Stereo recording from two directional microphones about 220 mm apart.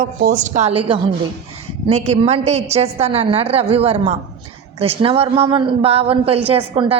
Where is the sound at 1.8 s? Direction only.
30° right (ahead or behind).